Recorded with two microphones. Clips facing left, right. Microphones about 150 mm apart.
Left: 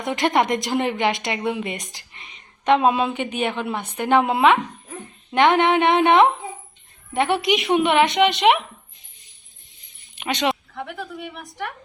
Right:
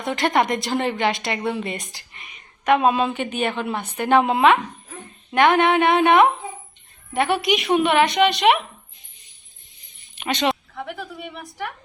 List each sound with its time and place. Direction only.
0.0 s a woman's voice: 20° left (ahead or behind)
4.2 s speech: 15° right (ahead or behind)
5.3 s speech: 20° left (ahead or behind)
10.2 s speech: 15° left (ahead or behind)
10.5 s a woman's voice: centre (ahead or behind)